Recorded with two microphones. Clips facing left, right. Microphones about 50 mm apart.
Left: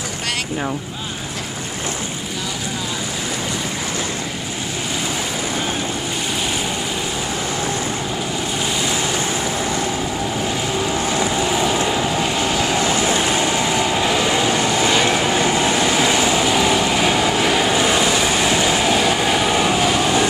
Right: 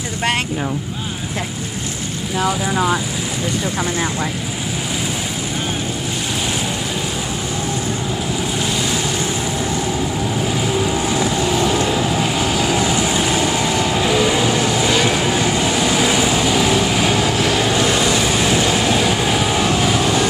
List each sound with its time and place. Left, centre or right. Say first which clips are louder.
2.4 s speech: right 12 dB; right
10.4 s vehicle: right 4 dB; centre